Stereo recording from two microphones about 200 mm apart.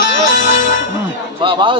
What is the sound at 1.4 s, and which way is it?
Speech, 25° right (ahead or behind).